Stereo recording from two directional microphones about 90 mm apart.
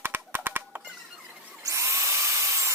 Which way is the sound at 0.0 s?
25° right (ahead or behind).